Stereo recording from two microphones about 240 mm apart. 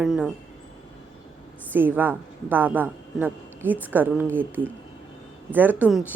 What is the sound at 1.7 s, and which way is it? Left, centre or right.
A woman's voice, centre.